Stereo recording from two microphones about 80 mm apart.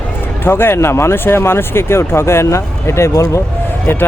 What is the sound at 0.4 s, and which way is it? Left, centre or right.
Speech, left.